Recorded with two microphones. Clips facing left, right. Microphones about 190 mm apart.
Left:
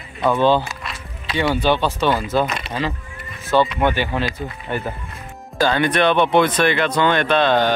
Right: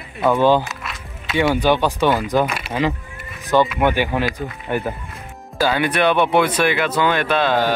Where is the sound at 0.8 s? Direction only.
Centre (ahead or behind).